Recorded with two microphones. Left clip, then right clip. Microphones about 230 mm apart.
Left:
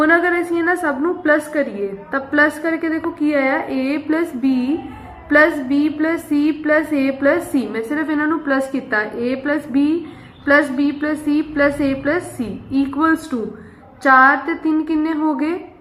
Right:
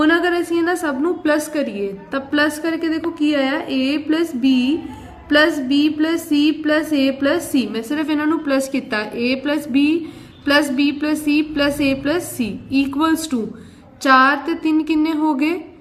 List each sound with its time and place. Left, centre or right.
0.0 s a woman's voice: right
5.3 s a woman's voice: right